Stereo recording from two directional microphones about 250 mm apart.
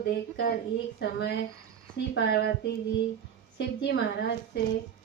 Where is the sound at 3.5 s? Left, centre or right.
Left.